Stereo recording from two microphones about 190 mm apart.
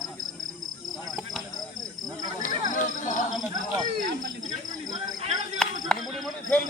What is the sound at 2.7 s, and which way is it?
Speech, 40° left (ahead or behind).